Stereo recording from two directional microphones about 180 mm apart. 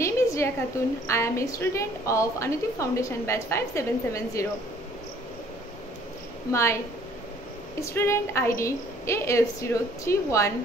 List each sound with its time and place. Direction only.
0.0 s a sound: 15° left (ahead or behind)
1.0 s a woman's voice: 15° left (ahead or behind)
6.5 s a woman's voice: 15° left (ahead or behind)
7.8 s a woman's voice: 15° left (ahead or behind)